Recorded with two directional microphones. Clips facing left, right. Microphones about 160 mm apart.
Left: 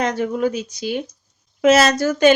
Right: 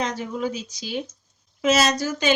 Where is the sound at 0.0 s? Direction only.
60° left (ahead or behind).